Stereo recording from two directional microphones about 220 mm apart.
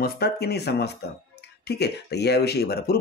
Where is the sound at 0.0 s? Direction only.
45° left (ahead or behind).